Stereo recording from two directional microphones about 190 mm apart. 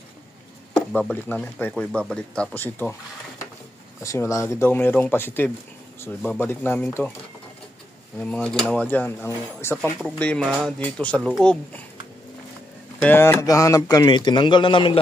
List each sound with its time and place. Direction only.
0.9 s speech: 10° left (ahead or behind)
8.2 s speech: 5° left (ahead or behind)
13.0 s a man's voice: 10° left (ahead or behind); by 15.0 s 25° left (ahead or behind)